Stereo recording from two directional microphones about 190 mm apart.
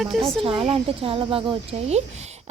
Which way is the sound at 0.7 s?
30° right (ahead or behind).